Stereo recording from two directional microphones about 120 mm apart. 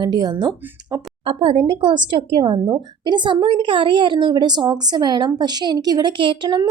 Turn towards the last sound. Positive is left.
turn(degrees=-35)  # may be behind; listen again after turning